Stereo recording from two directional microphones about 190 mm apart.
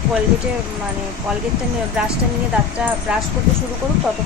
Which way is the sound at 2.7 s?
5° right (ahead or behind).